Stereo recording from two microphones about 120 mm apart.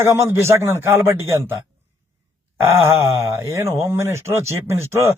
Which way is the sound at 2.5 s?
20° right (ahead or behind).